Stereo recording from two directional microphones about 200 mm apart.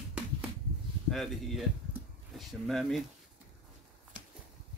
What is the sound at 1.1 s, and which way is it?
Speech, centre (ahead or behind).